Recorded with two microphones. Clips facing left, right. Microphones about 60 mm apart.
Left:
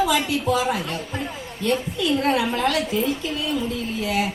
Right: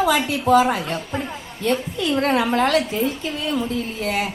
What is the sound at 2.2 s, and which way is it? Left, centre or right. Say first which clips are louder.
Speech: right 5 dB; right.